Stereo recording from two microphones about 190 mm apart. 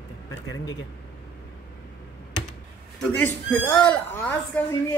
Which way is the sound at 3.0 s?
10° left (ahead or behind).